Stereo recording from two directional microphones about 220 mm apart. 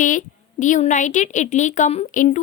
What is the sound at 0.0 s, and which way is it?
A woman's voice, 35° left (ahead or behind).